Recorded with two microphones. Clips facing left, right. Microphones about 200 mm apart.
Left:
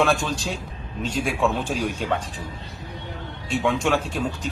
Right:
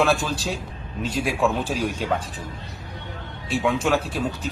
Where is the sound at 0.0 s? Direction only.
Centre (ahead or behind).